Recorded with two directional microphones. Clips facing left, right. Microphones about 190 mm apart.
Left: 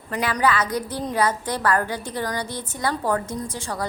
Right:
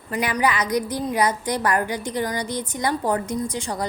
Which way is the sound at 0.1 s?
10° right (ahead or behind).